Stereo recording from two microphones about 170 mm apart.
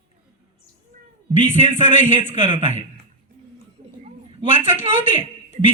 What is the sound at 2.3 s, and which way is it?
Speech, 35° right (ahead or behind).